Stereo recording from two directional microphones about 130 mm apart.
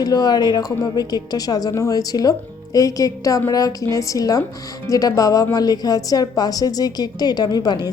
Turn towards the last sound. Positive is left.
turn(degrees=30)  # may be behind; listen again after turning